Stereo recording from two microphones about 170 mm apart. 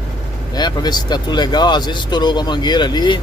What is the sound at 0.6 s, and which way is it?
Speech, 25° left (ahead or behind).